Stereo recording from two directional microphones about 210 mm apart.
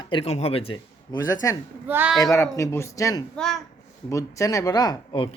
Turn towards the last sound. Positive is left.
turn(degrees=20)  # may be behind; listen again after turning